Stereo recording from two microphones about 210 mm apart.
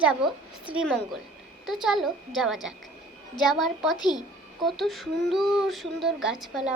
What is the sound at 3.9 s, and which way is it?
Speech, 20° left (ahead or behind).